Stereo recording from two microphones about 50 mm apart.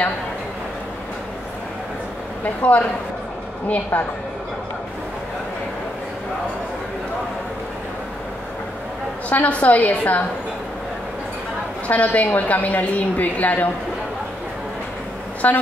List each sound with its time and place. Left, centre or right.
2.4 s a woman's voice: left
9.3 s a woman's voice: left
11.9 s a woman's voice: left
15.4 s a woman's voice: left